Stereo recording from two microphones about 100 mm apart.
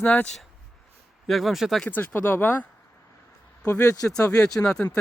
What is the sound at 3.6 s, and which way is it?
Speech, 30° left (ahead or behind).